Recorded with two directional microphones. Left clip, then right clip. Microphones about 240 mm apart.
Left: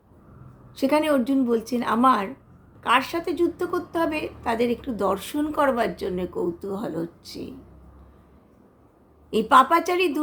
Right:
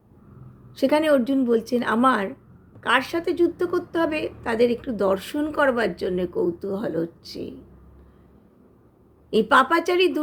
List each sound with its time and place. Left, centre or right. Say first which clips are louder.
0.8 s a woman's voice: right 2 dB; centre
9.3 s a woman's voice: left 1 dB; centre